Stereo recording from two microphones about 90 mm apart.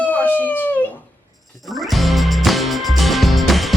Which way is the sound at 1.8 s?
Centre (ahead or behind).